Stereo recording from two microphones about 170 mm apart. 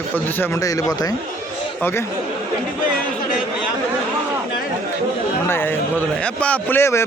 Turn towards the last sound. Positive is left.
turn(degrees=15)  # may be behind; listen again after turning